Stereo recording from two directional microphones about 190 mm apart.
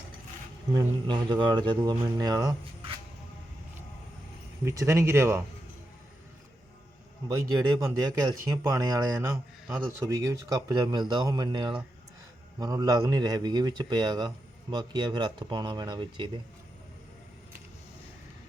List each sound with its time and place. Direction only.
0.7 s a man's voice: 25° right (ahead or behind)
4.6 s speech: 15° right (ahead or behind)
7.3 s a man's voice: 15° right (ahead or behind)